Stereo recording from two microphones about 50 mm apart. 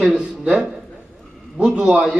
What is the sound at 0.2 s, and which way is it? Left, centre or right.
Speech, centre.